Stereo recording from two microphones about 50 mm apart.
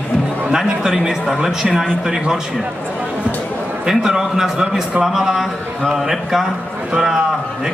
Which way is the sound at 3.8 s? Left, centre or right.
Centre.